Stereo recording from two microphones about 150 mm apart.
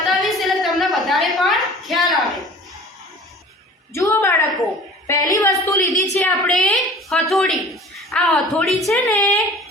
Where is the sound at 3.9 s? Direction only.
15° left (ahead or behind).